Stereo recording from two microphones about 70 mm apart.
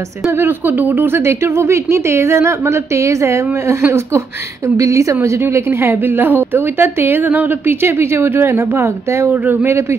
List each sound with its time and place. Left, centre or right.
0.3 s a woman's voice: right
9.3 s speech: right
9.7 s a woman's voice: right